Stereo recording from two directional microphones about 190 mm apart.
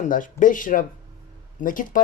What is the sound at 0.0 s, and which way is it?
Speech, 45° left (ahead or behind).